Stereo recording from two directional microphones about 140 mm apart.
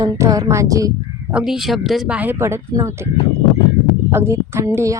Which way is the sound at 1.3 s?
5° right (ahead or behind).